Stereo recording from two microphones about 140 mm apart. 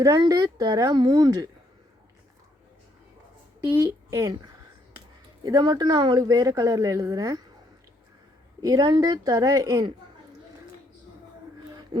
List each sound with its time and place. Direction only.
0.0 s a woman's voice: 25° right (ahead or behind)
3.8 s a woman's voice: 25° right (ahead or behind)
5.5 s a woman's voice: 30° right (ahead or behind)
8.6 s a woman's voice: 30° right (ahead or behind)